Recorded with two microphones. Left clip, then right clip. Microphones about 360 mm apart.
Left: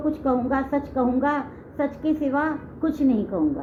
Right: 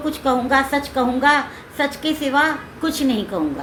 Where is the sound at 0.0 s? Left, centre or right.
Centre.